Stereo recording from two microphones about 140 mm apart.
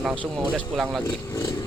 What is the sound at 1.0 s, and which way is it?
Speech, 25° left (ahead or behind).